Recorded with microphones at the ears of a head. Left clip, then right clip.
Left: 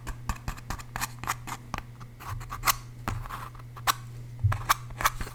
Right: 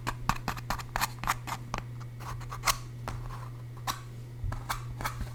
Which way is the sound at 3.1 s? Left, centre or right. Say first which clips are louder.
Left 7 dB; left.